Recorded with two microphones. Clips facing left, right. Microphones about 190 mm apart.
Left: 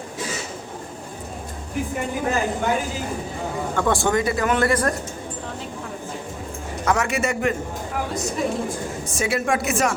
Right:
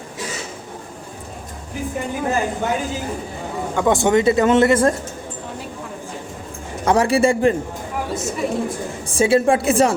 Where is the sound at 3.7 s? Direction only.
20° right (ahead or behind).